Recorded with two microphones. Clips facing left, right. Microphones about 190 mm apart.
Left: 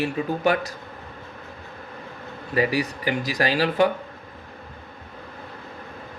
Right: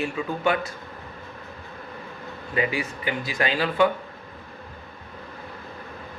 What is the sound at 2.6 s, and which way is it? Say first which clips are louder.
Speech: left 4 dB; 40° left (ahead or behind).